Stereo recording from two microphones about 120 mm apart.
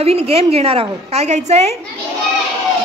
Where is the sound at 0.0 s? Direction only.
55° right (ahead or behind).